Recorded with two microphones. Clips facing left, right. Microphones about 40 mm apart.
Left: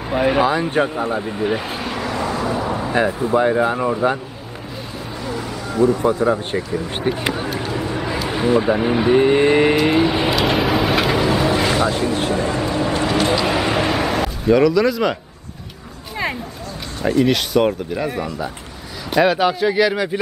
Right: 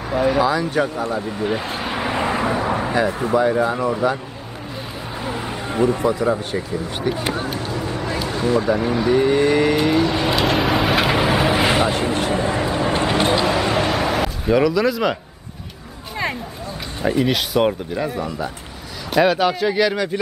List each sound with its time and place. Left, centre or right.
0.1 s speech: left
1.2 s speech: centre
2.0 s vehicle: right
3.0 s speech: left
5.2 s a sound: right
6.2 s speech: left
7.3 s speech: centre
8.3 s speech: left
10.3 s vehicle: centre
11.1 s music: centre; by 12.2 s right
12.3 s vehicle: right
13.5 s a sound: centre
17.2 s speech: centre